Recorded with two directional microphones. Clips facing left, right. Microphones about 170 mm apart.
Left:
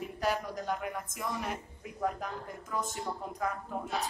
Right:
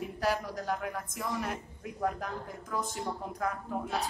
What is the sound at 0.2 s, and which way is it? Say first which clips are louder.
A woman's voice: right 1 dB; 5° right (ahead or behind).